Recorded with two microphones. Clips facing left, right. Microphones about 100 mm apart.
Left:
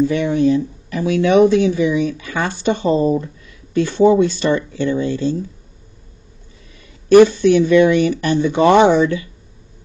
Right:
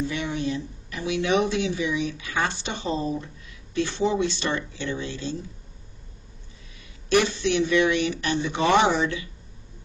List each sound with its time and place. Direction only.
0.0 s speech: 50° left (ahead or behind)
7.1 s speech: 50° left (ahead or behind)